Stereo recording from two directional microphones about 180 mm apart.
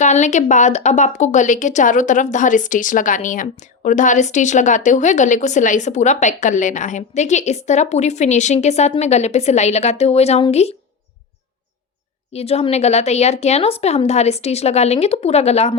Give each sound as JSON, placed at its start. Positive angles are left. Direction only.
{"t": 0.0, "sound": "speech", "side_deg": 40}
{"t": 12.3, "sound": "speech", "side_deg": 35}